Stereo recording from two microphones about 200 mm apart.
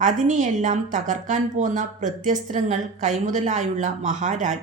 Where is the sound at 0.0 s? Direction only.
40° right (ahead or behind).